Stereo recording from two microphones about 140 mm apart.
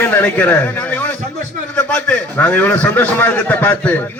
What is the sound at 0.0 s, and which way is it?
A man's voice, 10° left (ahead or behind).